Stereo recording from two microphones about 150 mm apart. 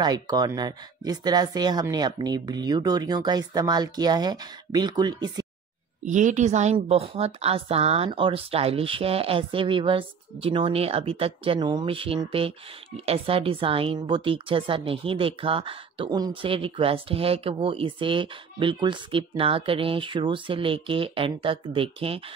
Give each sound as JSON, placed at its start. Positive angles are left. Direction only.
{"t": 0.0, "sound": "speech", "side_deg": -25}
{"t": 6.0, "sound": "a woman's voice", "side_deg": -55}